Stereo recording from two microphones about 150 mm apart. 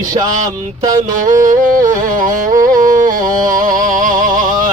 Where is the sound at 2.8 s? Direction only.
60° right (ahead or behind).